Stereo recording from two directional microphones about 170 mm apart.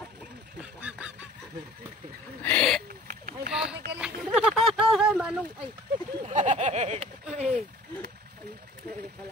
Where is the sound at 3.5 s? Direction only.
5° right (ahead or behind).